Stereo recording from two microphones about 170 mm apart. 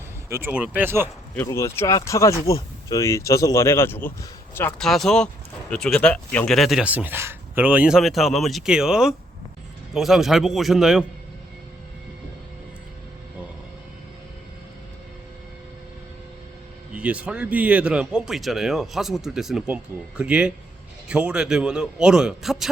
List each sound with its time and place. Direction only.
0.3 s speech: 15° right (ahead or behind)
1.4 s speech: 15° left (ahead or behind)
4.8 s speech: centre (ahead or behind)
16.9 s speech: 10° right (ahead or behind)